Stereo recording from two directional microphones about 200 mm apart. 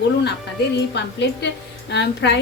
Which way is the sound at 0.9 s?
60° left (ahead or behind).